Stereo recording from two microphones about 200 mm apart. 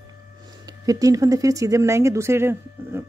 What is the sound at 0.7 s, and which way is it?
Speech, 15° right (ahead or behind).